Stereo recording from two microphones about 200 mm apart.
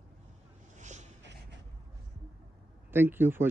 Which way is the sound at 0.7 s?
35° right (ahead or behind).